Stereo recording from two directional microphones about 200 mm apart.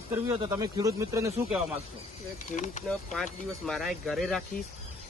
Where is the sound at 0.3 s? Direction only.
15° right (ahead or behind).